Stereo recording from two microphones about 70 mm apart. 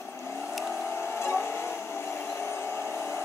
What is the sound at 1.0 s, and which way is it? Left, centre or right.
Vehicle, left.